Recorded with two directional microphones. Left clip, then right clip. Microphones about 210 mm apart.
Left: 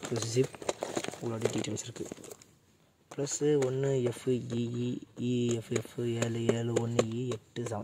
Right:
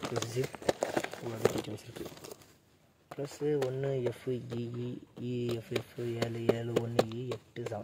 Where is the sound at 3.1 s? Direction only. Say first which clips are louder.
Left 4 dB; 55° left (ahead or behind).